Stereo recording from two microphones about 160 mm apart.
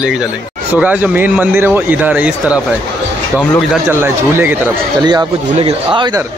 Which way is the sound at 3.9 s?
15° right (ahead or behind).